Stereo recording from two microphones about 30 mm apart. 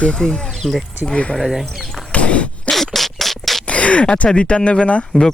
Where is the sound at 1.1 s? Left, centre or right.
Left.